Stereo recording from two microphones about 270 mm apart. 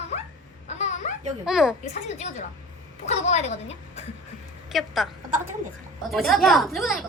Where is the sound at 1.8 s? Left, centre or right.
Left.